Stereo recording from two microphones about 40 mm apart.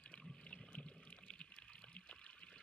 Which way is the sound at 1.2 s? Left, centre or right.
Centre.